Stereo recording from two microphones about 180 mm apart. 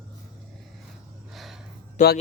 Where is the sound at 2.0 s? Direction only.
45° left (ahead or behind).